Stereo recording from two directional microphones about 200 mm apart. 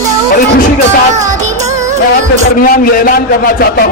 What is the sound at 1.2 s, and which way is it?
Music, 35° right (ahead or behind).